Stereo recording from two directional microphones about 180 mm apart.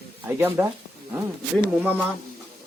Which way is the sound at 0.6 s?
10° right (ahead or behind).